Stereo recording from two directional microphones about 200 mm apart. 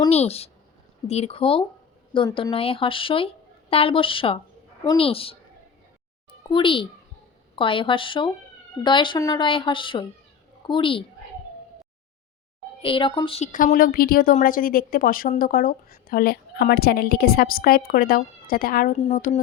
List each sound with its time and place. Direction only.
0.1 s speech: 30° left (ahead or behind)
6.5 s speech: 25° left (ahead or behind)
12.8 s speech: 25° left (ahead or behind)
13.5 s a woman's voice: 40° left (ahead or behind)